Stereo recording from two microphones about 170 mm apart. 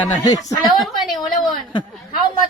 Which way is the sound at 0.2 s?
20° left (ahead or behind).